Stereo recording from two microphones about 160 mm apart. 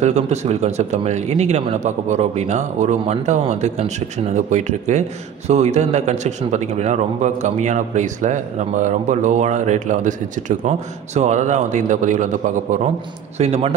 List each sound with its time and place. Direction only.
0.0 s a man's voice: 45° right (ahead or behind)
13.4 s speech: 40° right (ahead or behind)